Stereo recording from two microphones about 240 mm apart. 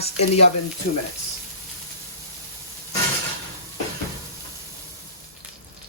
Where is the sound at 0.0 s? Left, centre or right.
Left.